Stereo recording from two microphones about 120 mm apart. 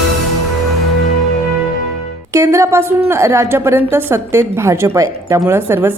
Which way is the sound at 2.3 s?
20° right (ahead or behind).